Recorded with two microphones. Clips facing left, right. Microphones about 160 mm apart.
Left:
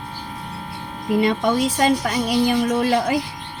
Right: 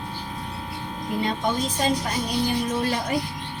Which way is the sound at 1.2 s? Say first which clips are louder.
Left 6 dB; 90° left.